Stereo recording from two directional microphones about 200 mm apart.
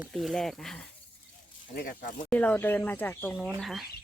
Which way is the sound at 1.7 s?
45° left (ahead or behind).